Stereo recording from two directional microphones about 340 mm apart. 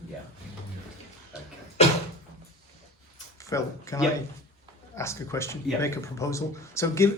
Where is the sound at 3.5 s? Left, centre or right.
Centre.